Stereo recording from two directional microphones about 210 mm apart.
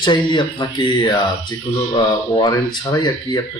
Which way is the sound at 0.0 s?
20° left (ahead or behind).